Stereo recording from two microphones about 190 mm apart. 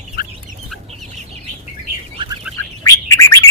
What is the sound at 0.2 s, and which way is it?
Chicken, 50° left (ahead or behind).